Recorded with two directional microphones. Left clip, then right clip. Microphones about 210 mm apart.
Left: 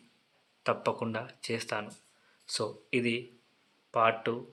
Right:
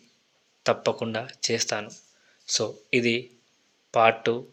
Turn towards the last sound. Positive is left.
turn(degrees=-20)  # may be behind; listen again after turning